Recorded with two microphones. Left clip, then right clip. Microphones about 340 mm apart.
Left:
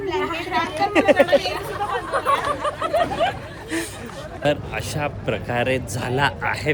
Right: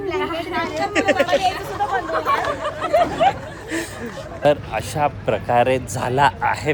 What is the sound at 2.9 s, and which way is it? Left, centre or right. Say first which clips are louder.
Speech: right 6 dB; right.